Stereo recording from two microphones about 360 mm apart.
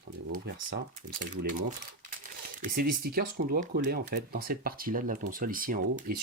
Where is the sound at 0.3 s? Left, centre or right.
Right.